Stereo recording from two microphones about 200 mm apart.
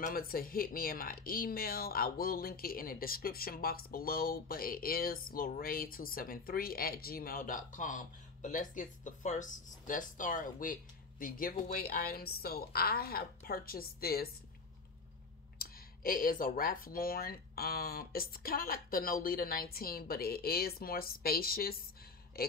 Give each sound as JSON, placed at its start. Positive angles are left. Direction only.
{"t": 0.0, "sound": "speech", "side_deg": 45}
{"t": 15.6, "sound": "a man's voice", "side_deg": 45}